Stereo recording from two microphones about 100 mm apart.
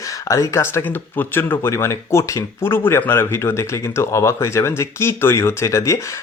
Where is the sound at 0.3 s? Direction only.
30° left (ahead or behind).